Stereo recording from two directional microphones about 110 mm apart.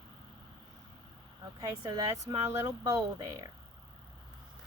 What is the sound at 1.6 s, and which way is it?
Speech, 35° right (ahead or behind).